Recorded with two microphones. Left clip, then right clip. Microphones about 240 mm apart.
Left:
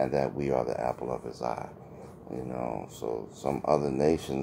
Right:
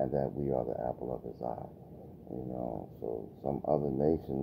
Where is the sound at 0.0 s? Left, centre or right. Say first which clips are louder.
Left 5 dB; centre.